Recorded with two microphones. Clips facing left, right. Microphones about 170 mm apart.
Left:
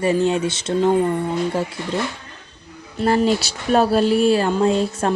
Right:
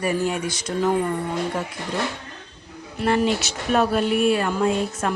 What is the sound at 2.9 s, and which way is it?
Speech, 35° left (ahead or behind).